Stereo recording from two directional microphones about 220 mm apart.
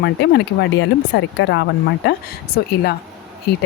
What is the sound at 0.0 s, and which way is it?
Speech, 50° left (ahead or behind).